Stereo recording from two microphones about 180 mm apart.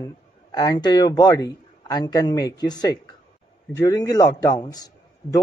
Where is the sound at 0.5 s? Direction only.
20° left (ahead or behind).